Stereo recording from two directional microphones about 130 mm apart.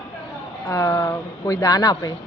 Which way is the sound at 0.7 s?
25° left (ahead or behind).